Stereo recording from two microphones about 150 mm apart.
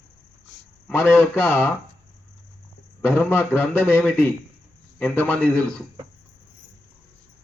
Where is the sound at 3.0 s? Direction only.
15° left (ahead or behind).